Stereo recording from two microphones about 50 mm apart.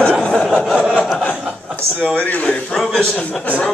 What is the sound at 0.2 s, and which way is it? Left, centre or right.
Chuckle, centre.